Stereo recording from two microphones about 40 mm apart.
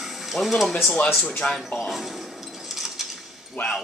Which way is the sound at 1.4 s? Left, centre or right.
Left.